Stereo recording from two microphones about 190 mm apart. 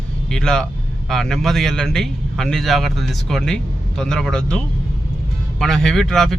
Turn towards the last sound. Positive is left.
turn(degrees=0)  # may be behind; listen again after turning